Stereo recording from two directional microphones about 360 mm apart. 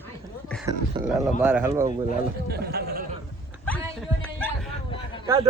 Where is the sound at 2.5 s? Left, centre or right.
Right.